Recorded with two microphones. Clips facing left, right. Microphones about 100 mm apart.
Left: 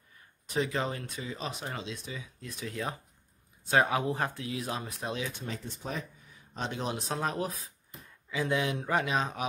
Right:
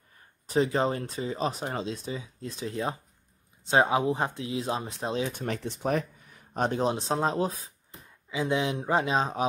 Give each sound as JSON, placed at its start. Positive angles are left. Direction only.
{"t": 0.5, "sound": "speech", "side_deg": -30}
{"t": 5.4, "sound": "speech", "side_deg": -70}
{"t": 6.5, "sound": "speech", "side_deg": -50}
{"t": 6.8, "sound": "speech", "side_deg": -30}